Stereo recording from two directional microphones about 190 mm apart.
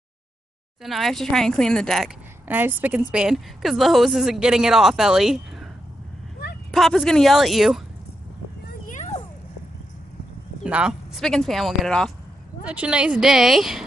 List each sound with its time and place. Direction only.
0.8 s a woman's voice: centre (ahead or behind)
2.4 s a woman's voice: 10° right (ahead or behind)
6.7 s a woman's voice: centre (ahead or behind)
8.8 s a sound: 40° left (ahead or behind)
10.6 s a woman's voice: 5° right (ahead or behind)